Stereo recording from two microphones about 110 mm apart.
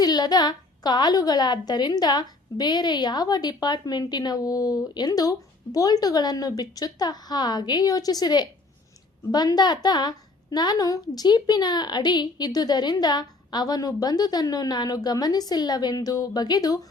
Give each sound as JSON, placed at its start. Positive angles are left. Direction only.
{"t": 0.0, "sound": "a woman's voice", "side_deg": 35}